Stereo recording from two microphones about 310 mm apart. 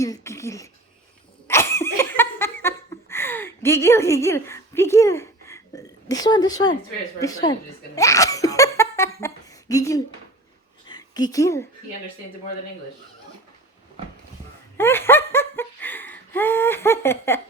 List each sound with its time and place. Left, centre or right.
0.0 s speech: centre
1.5 s laughter: centre
7.2 s speech: centre
7.9 s laughter: centre
10.8 s a woman's voice: centre
14.8 s laughter: centre